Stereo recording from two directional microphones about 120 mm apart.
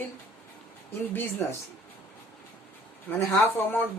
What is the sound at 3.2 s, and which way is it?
Speech, 15° left (ahead or behind).